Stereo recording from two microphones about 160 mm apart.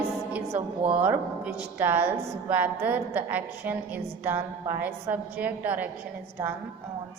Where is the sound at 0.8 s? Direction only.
35° right (ahead or behind).